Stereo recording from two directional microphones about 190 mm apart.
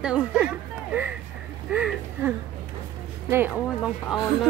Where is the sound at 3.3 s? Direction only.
10° right (ahead or behind).